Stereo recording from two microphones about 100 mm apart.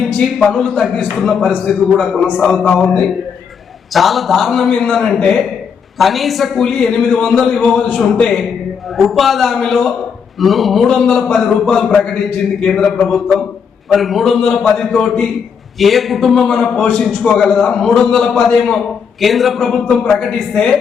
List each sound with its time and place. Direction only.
0.0 s a man's voice: centre (ahead or behind)
3.9 s a man's voice: centre (ahead or behind)